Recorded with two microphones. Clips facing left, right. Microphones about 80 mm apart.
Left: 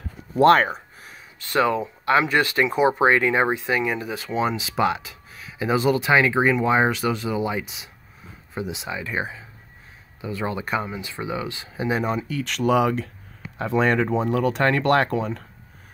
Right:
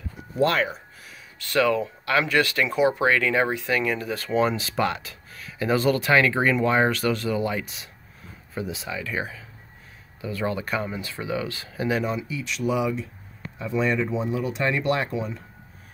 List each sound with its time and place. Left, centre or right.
0.4 s speech: left
1.1 s speech: left
12.3 s speech: left